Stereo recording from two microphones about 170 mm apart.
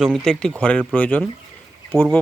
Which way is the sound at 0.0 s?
Centre (ahead or behind).